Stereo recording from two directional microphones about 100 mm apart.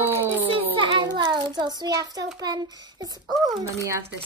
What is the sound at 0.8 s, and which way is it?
A child's voice, 50° right (ahead or behind).